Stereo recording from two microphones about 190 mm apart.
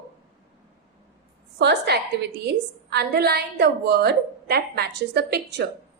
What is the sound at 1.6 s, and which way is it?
A woman's voice, 60° right (ahead or behind).